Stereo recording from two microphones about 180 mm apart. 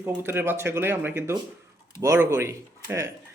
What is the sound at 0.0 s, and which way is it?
A man's voice, 10° right (ahead or behind).